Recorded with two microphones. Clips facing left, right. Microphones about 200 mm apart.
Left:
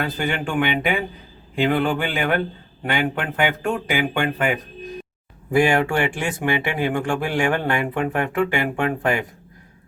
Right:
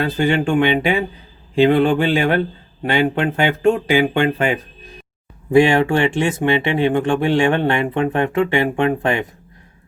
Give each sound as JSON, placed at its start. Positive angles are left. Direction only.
{"t": 0.0, "sound": "speech", "side_deg": -25}